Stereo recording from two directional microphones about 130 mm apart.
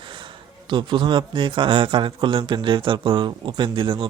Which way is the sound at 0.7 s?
35° right (ahead or behind).